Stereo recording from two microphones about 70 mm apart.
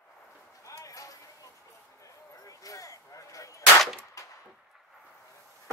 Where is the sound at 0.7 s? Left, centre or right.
Left.